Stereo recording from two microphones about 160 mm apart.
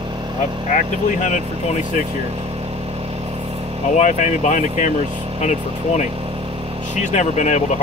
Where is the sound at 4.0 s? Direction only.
50° left (ahead or behind).